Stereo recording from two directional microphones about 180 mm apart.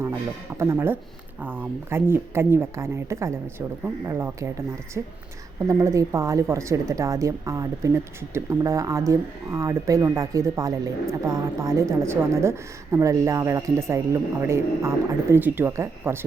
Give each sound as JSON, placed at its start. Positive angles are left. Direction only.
{"t": 0.5, "sound": "a woman's voice", "side_deg": -15}